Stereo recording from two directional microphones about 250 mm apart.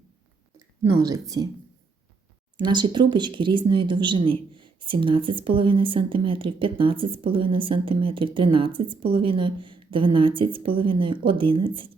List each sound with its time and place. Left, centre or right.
2.6 s speech: centre